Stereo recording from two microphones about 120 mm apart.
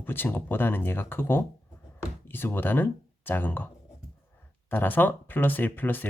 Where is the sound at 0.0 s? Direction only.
20° left (ahead or behind).